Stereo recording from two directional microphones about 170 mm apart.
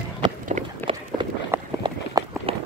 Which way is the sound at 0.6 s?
45° right (ahead or behind).